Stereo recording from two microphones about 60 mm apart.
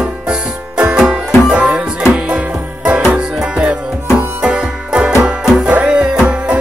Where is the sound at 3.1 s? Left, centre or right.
Centre.